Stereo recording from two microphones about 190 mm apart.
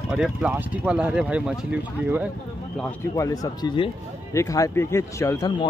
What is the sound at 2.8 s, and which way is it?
A man's voice, 15° left (ahead or behind).